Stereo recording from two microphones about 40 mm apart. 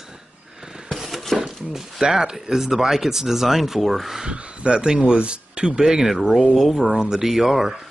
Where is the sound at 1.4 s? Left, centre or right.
Centre.